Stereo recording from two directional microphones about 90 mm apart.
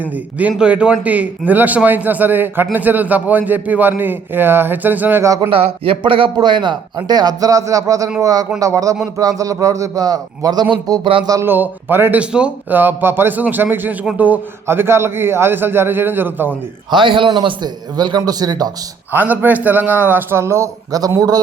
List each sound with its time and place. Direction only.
0.0 s a man's voice: 15° right (ahead or behind)
5.2 s speech: 40° right (ahead or behind)
5.5 s speech: 90° right
6.3 s a man's voice: 55° right (ahead or behind)
11.4 s a man's voice: 20° right (ahead or behind)
12.2 s a man's voice: 10° right (ahead or behind)
12.8 s a man's voice: 25° right (ahead or behind)
16.9 s a man's voice: 70° right (ahead or behind); by 18.7 s 45° right (ahead or behind)
19.1 s a man's voice: 20° right (ahead or behind); by 21.4 s 45° right (ahead or behind)